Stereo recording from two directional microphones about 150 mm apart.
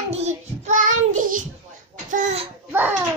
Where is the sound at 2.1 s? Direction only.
55° right (ahead or behind).